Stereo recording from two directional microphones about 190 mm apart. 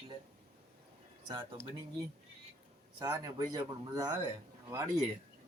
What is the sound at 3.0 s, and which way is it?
Speech, 20° right (ahead or behind).